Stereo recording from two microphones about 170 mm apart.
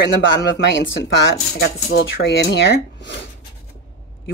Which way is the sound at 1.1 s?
90° left.